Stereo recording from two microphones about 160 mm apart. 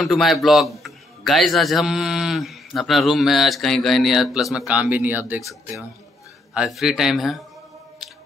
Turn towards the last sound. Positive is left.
turn(degrees=0)  # may be behind; listen again after turning